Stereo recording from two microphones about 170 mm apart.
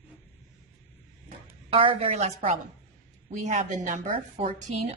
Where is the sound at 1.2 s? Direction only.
35° right (ahead or behind).